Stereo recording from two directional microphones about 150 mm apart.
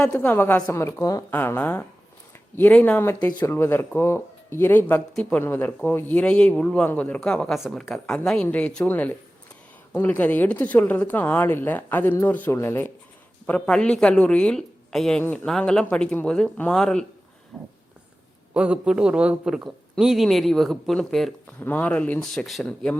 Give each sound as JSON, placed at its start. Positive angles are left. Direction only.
{"t": 0.1, "sound": "a man's voice", "side_deg": 15}